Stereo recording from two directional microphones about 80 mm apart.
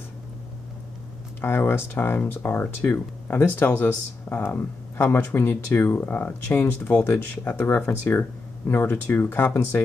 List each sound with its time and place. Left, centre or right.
1.4 s speech: left
6.8 s speech: centre
7.1 s speech: left